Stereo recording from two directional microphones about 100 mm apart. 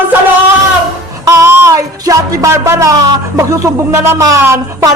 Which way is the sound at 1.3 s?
30° right (ahead or behind).